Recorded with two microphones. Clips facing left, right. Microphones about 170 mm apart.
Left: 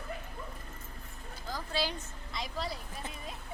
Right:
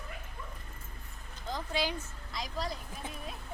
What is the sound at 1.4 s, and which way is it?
Speech, 20° right (ahead or behind).